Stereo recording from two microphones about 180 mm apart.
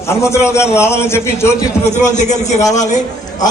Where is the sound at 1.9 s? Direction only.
40° left (ahead or behind).